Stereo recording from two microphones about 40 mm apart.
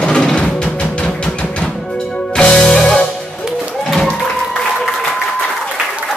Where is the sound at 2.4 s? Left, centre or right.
Left.